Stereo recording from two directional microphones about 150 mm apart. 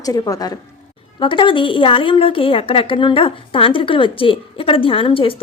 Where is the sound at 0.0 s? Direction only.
25° left (ahead or behind).